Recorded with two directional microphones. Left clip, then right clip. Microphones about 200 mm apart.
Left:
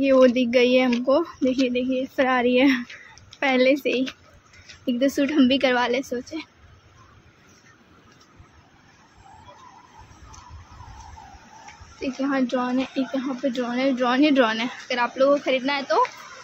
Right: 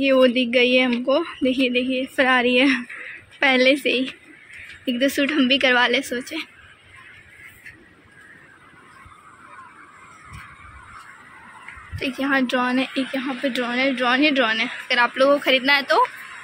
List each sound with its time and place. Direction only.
0.0 s a woman's voice: 5° left (ahead or behind)
12.0 s a woman's voice: centre (ahead or behind); by 14.7 s 20° left (ahead or behind)
14.9 s speech: centre (ahead or behind)